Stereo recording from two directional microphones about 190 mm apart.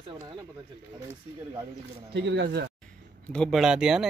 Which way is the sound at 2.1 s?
65° right (ahead or behind).